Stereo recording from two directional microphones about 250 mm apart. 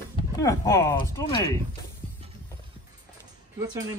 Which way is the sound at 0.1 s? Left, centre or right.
Centre.